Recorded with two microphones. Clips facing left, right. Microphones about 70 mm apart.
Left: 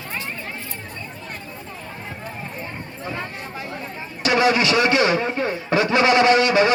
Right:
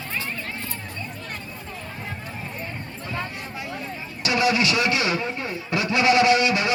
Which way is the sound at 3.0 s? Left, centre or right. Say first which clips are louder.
Left 2 dB; centre.